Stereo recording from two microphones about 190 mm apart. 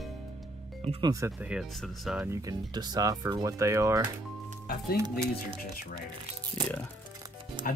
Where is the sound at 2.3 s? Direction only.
20° right (ahead or behind).